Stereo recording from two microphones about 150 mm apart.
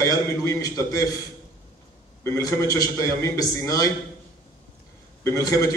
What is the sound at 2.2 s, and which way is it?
A man's voice, 20° left (ahead or behind).